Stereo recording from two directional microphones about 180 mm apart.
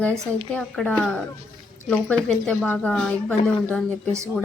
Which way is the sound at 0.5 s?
5° left (ahead or behind).